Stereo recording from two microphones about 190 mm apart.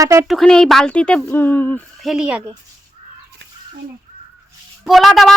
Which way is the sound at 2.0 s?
5° right (ahead or behind).